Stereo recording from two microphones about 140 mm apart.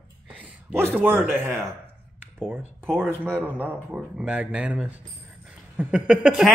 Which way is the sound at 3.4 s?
10° right (ahead or behind).